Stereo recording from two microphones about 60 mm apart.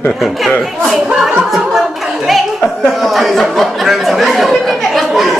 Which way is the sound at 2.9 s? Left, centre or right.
Centre.